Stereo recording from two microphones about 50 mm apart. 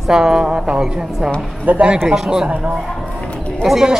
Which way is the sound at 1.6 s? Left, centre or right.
Right.